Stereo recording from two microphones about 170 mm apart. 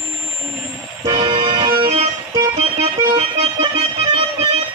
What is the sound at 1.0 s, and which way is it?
Music, 20° right (ahead or behind).